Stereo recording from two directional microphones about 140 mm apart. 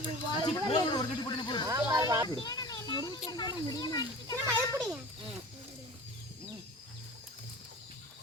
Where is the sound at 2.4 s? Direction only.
30° left (ahead or behind).